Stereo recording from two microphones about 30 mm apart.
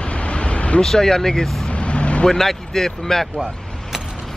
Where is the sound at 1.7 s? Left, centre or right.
Left.